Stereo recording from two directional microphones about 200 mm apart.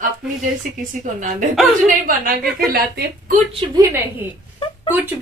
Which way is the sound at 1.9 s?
45° right (ahead or behind).